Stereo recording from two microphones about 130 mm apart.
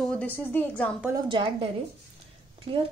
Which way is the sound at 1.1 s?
35° right (ahead or behind).